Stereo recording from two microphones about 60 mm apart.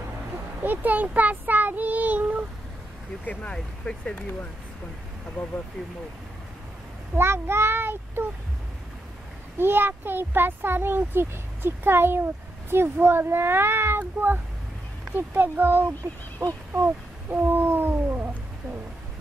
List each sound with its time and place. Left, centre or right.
0.7 s speech: right
3.5 s speech: centre
4.1 s speech: left
7.2 s a child's voice: right
9.6 s a child's voice: right
16.7 s a sound: right